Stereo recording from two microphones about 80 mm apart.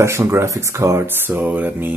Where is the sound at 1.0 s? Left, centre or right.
Right.